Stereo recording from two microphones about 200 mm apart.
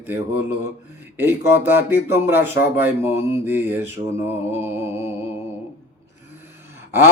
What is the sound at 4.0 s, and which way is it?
Mantra, 25° right (ahead or behind).